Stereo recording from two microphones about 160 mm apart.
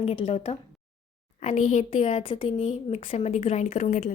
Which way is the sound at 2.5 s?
45° left (ahead or behind).